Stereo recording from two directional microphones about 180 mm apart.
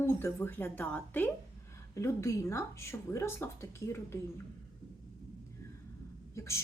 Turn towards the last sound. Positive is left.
turn(degrees=15)  # may be behind; listen again after turning